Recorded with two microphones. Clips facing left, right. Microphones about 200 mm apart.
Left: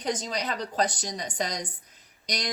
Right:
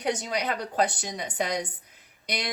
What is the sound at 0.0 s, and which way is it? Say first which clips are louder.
Speech: right 2 dB; 10° right (ahead or behind).